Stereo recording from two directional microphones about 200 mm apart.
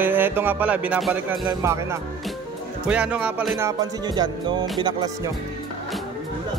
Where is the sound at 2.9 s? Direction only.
5° right (ahead or behind).